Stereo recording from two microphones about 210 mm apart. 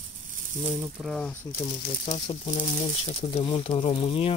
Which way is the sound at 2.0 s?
30° left (ahead or behind).